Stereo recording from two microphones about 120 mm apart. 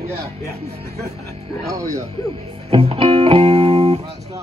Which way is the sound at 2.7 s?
50° right (ahead or behind).